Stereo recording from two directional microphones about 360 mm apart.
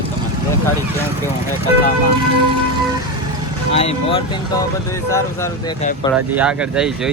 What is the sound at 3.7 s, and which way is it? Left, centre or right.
Speech, centre.